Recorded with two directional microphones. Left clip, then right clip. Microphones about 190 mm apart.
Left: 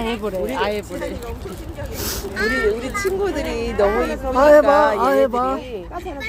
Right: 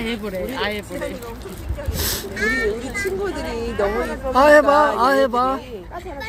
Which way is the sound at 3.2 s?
40° left (ahead or behind).